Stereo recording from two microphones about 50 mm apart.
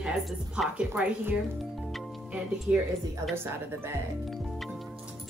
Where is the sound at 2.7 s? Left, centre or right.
Right.